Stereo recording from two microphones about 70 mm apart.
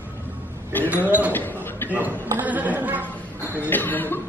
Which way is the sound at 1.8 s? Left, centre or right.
Right.